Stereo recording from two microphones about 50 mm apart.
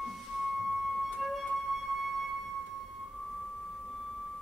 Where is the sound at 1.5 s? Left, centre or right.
Centre.